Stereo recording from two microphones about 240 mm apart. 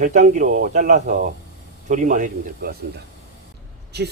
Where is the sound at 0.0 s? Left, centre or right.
Right.